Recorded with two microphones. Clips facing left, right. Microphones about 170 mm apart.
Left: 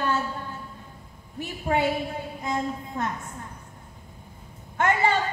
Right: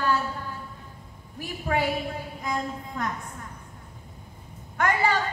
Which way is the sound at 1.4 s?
25° left (ahead or behind).